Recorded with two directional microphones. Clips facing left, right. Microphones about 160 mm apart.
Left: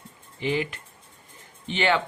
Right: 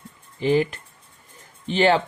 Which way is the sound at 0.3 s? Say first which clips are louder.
Right 7 dB; 40° right (ahead or behind).